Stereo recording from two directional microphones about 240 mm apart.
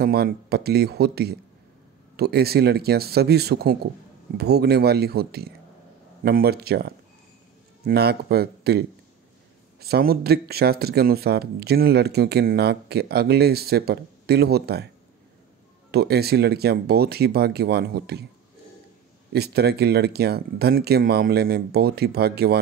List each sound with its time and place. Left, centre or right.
0.0 s speech: right
15.9 s speech: right
19.3 s speech: right